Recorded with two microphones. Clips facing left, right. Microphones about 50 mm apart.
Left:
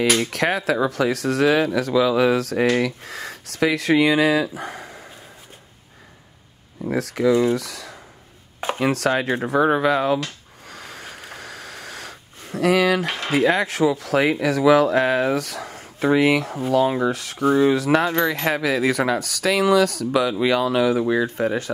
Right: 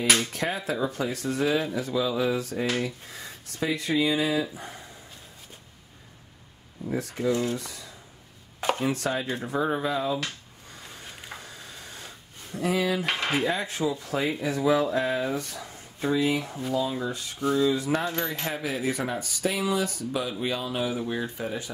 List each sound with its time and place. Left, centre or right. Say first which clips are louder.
0.3 s speech: left 8 dB; left
6.9 s speech: left 8 dB; left
10.7 s a sound: left 7 dB; left
13.0 s speech: left 2 dB; centre
13.3 s speech: left 12 dB; left
16.7 s speech: left 10 dB; left